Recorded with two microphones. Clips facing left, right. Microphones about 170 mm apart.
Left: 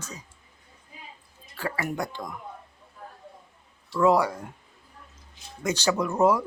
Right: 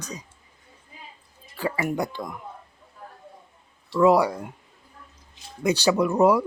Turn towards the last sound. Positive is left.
turn(degrees=-15)  # may be behind; listen again after turning